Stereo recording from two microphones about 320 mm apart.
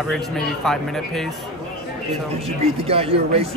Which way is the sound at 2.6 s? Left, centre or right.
Centre.